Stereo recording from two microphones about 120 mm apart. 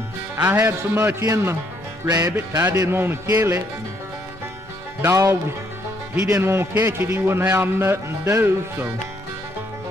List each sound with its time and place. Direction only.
0.4 s a man's voice: 20° right (ahead or behind)
2.0 s music: 30° right (ahead or behind)
2.5 s a man's voice: 30° right (ahead or behind)
5.0 s a man's voice: 25° right (ahead or behind)